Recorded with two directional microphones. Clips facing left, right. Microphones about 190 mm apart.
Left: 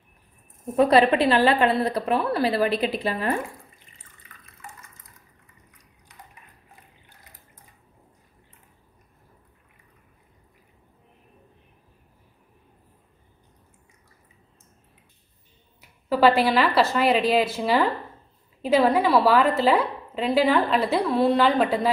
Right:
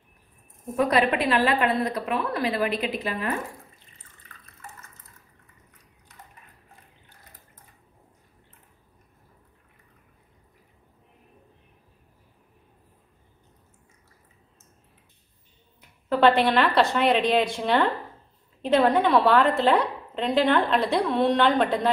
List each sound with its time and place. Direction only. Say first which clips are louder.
0.7 s a woman's voice: left 5 dB; 30° left (ahead or behind)
4.6 s water: left 1 dB; 15° left (ahead or behind)
15.8 s a woman's voice: left 1 dB; 5° left (ahead or behind)